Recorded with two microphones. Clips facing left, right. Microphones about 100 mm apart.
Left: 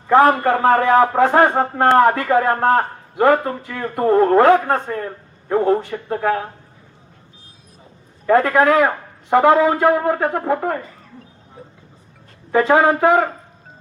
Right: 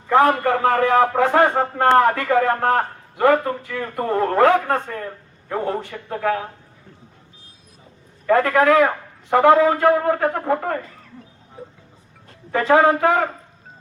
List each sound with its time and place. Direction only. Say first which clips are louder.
0.1 s a man's voice: left 3 dB; 30° left (ahead or behind)
8.3 s a man's voice: left 1 dB; 25° left (ahead or behind)
12.5 s speech: left 1 dB; 20° left (ahead or behind)